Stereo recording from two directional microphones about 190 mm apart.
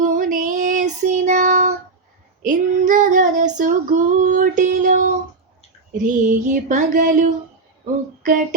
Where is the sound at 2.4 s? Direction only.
45° right (ahead or behind).